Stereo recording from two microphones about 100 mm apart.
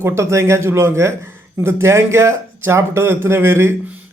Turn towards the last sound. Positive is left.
turn(degrees=-25)  # may be behind; listen again after turning